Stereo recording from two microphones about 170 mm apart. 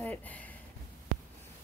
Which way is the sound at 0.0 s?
10° left (ahead or behind).